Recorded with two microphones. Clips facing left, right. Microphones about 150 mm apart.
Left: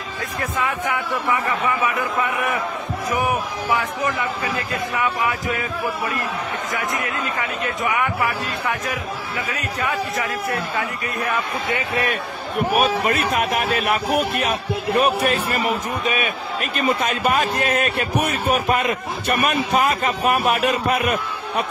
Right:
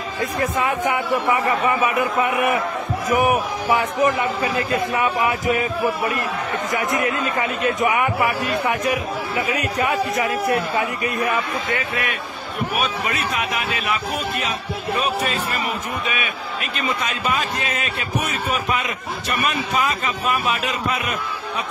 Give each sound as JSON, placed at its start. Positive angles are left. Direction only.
{"t": 0.6, "sound": "a man's voice", "side_deg": -20}
{"t": 6.7, "sound": "a man's voice", "side_deg": -20}
{"t": 9.8, "sound": "a man's voice", "side_deg": -20}
{"t": 12.7, "sound": "speech", "side_deg": 50}
{"t": 16.7, "sound": "speech", "side_deg": 50}